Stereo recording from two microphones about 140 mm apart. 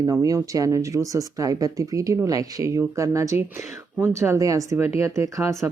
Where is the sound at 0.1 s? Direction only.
20° right (ahead or behind).